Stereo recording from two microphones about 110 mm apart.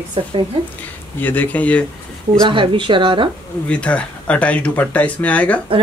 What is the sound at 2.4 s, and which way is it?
Speech, 50° right (ahead or behind).